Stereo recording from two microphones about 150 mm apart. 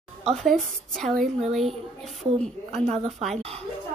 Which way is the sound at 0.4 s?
Centre (ahead or behind).